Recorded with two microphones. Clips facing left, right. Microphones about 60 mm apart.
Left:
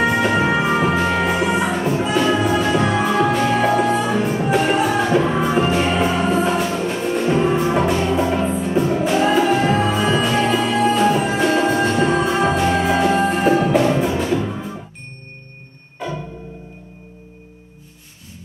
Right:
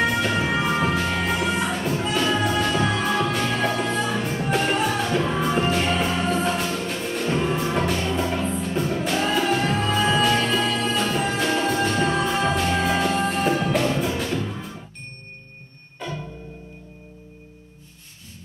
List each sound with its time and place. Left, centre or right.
0.0 s music: centre
16.0 s music: centre